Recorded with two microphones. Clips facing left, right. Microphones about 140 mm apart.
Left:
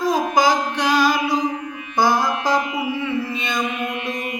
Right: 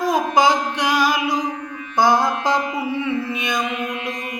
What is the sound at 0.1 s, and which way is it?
Music, 20° right (ahead or behind).